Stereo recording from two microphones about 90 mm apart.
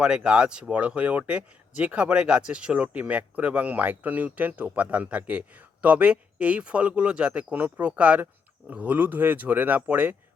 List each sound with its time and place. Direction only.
0.0 s speech: 10° right (ahead or behind)